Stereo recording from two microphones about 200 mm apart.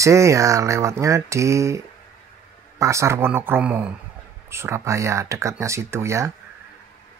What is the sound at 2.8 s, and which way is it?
Speech, 15° right (ahead or behind).